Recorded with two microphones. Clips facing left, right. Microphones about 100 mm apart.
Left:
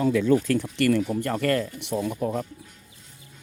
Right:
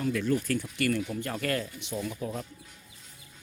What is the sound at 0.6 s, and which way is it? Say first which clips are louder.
Speech: left 7 dB; 90° left.